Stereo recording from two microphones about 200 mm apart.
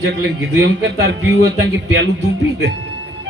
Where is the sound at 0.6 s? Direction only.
60° right (ahead or behind).